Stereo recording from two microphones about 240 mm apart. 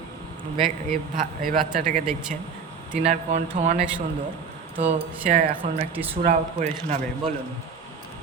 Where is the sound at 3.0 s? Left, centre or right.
Right.